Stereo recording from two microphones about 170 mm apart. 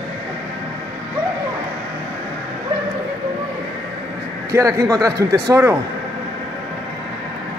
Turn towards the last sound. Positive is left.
turn(degrees=-20)  # may be behind; listen again after turning